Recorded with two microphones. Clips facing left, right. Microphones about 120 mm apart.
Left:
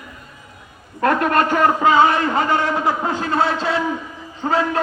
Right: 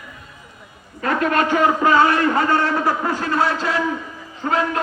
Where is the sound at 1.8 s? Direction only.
20° left (ahead or behind).